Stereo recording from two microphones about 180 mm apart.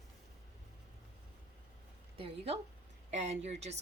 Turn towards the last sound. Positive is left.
turn(degrees=-40)  # may be behind; listen again after turning